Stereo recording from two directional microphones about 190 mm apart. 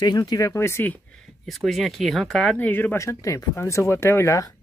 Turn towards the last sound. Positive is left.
turn(degrees=15)  # may be behind; listen again after turning